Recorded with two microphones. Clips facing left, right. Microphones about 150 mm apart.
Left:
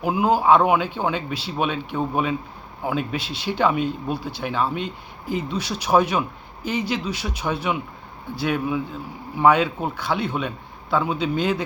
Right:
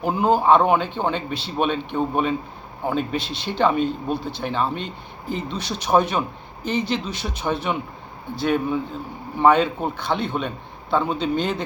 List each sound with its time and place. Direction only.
0.0 s speech: 10° left (ahead or behind)